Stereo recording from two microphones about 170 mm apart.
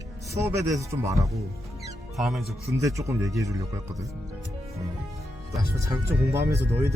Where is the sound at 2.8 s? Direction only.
20° right (ahead or behind).